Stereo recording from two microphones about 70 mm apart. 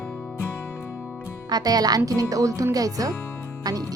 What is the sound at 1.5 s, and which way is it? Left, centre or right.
Speech, right.